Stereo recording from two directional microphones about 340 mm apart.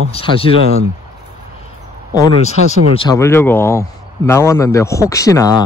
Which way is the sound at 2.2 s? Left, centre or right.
Centre.